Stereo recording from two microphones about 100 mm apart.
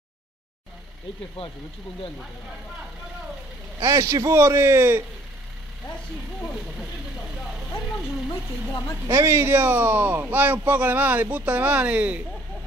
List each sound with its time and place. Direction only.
3.8 s speech: 30° right (ahead or behind)
8.3 s speech: 35° left (ahead or behind)
9.0 s speech: 25° right (ahead or behind)